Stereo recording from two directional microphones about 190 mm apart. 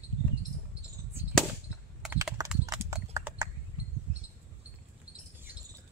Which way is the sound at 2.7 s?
15° right (ahead or behind).